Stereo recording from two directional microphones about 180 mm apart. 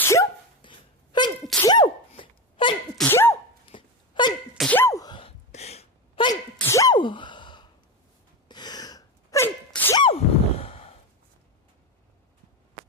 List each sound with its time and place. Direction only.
0.0 s dog: 15° left (ahead or behind)
0.6 s a sound: 25° left (ahead or behind)
1.6 s sneeze: 25° left (ahead or behind)
3.0 s sneeze: 10° left (ahead or behind)
3.7 s wail: 25° left (ahead or behind)
4.5 s sneeze: 5° left (ahead or behind)
4.8 s sneeze: 15° left (ahead or behind)
5.5 s sneeze: 35° left (ahead or behind)
6.6 s sneeze: 15° left (ahead or behind)
10.0 s a sound: 30° left (ahead or behind)